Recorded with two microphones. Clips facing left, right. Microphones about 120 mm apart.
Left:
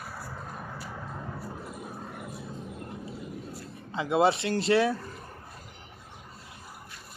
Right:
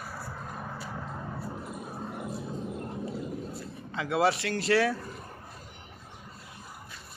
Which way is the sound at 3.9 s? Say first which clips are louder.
Left 2 dB; 20° left (ahead or behind).